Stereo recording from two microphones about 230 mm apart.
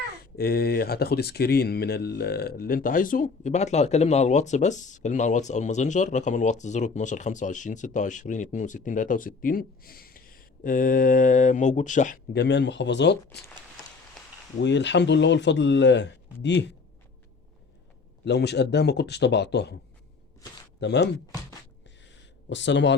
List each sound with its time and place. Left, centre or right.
0.3 s speech: left
12.3 s speech: left
14.6 s speech: left
18.3 s speech: left
20.8 s speech: left
22.0 s a sound: left